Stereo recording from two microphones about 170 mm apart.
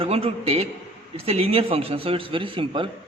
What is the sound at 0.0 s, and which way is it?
A man's voice, 35° right (ahead or behind).